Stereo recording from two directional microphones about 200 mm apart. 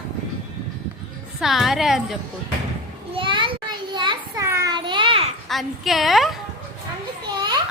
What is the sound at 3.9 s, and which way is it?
Children playing, 25° right (ahead or behind).